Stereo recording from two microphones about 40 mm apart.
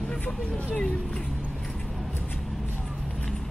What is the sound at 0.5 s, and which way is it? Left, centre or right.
Speech, centre.